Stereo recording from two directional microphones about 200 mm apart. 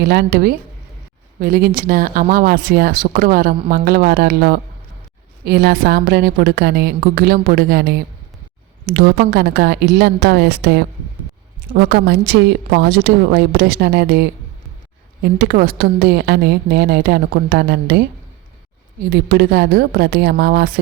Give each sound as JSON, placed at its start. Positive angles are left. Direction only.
{"t": 0.0, "sound": "a woman's voice", "side_deg": -55}
{"t": 19.1, "sound": "speech", "side_deg": -55}